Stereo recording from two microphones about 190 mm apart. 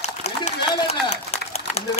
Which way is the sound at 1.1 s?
35° left (ahead or behind).